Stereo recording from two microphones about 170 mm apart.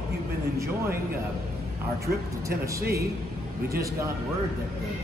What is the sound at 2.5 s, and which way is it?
Speech, 65° right (ahead or behind).